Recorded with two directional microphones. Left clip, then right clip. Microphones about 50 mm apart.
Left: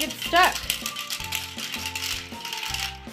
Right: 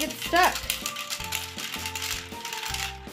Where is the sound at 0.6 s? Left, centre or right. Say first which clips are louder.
Left 2 dB; centre.